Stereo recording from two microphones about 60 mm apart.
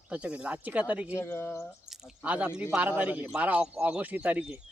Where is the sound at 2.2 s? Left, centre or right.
Right.